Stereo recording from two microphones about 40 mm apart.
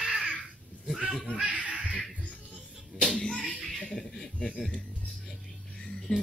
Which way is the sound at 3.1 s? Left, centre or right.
Centre.